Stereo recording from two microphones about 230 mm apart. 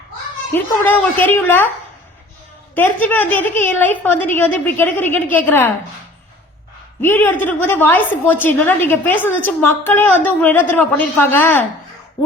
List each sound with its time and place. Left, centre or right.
0.5 s a woman's voice: centre
2.7 s a woman's voice: centre
7.0 s a woman's voice: centre